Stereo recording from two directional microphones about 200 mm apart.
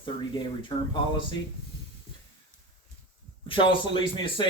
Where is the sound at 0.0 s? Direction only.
25° left (ahead or behind).